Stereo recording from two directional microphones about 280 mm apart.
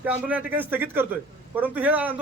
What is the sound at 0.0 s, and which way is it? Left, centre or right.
A man's voice, centre.